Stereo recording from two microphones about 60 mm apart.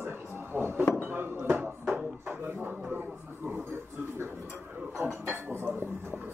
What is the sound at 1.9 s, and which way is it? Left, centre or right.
Drawer open or close, right.